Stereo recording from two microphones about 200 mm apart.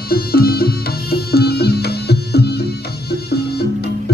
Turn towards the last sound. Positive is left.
turn(degrees=50)  # may be behind; listen again after turning